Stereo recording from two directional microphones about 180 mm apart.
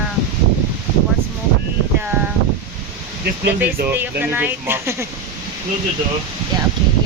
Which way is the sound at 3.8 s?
10° right (ahead or behind).